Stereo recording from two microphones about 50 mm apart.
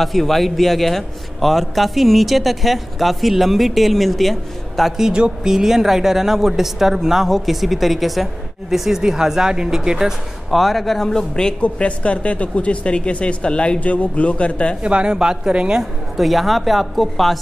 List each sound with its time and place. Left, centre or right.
0.0 s a man's voice: centre
5.1 s a woman's voice: centre
10.5 s speech: centre
11.6 s speech: left
14.8 s a woman's voice: right
15.8 s a man's voice: centre